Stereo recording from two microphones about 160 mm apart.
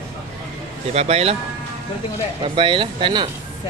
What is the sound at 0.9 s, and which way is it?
Speech, 40° right (ahead or behind).